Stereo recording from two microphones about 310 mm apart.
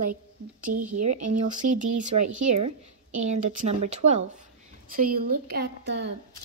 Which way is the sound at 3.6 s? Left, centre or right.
Right.